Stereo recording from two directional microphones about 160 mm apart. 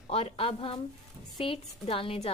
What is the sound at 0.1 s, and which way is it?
A woman's voice, 35° left (ahead or behind).